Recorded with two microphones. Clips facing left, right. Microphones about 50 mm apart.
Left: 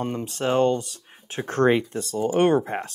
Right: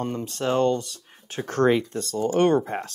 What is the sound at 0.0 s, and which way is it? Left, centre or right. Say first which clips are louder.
Speech: left 1 dB; centre.